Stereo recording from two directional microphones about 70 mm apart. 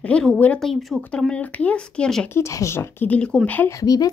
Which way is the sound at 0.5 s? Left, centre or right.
Centre.